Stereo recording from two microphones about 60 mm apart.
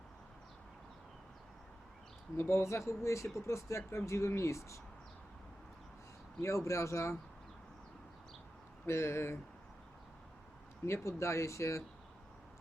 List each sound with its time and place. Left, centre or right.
2.3 s speech: left
6.4 s speech: left
8.9 s speech: left
10.8 s speech: left